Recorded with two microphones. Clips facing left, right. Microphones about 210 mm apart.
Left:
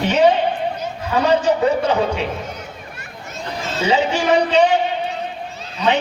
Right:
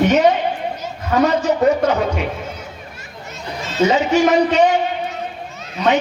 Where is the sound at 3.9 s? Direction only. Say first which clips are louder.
Right 1 dB; 30° left (ahead or behind).